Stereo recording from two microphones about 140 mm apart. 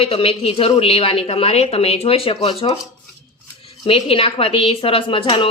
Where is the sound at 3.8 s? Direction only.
40° left (ahead or behind).